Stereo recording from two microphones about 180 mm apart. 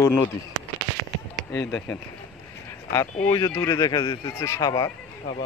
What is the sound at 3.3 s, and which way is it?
Speech, 20° left (ahead or behind).